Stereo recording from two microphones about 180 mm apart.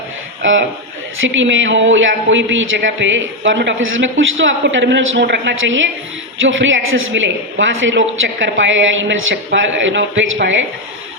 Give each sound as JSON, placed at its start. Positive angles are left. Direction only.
{"t": 1.2, "sound": "a man's voice", "side_deg": -90}